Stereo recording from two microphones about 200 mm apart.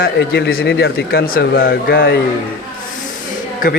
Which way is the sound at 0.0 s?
55° left (ahead or behind).